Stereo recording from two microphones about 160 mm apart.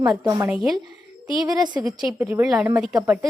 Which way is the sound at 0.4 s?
5° right (ahead or behind).